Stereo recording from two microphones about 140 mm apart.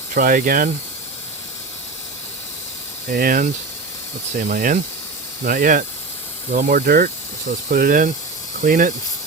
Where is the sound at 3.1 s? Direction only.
85° right.